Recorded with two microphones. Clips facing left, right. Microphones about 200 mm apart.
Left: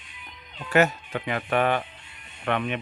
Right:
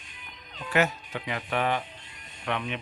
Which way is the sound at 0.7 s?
50° left (ahead or behind).